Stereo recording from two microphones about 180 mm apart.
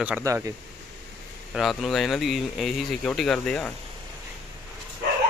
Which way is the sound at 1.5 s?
Centre (ahead or behind).